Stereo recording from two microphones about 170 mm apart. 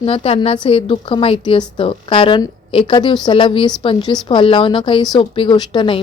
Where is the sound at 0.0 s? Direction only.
35° left (ahead or behind).